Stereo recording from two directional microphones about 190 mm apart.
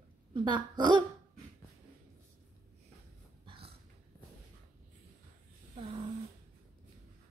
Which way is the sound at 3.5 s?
25° right (ahead or behind).